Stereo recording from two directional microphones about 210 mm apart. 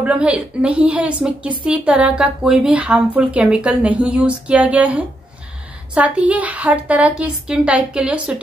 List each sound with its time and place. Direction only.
0.0 s a woman's voice: 5° right (ahead or behind)